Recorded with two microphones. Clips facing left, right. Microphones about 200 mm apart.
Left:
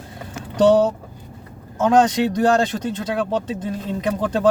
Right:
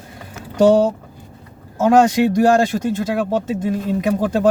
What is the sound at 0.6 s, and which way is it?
Speech, 10° right (ahead or behind).